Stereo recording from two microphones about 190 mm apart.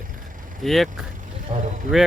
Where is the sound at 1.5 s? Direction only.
35° right (ahead or behind).